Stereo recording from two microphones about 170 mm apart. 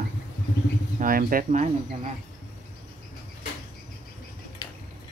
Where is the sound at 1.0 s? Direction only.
55° right (ahead or behind).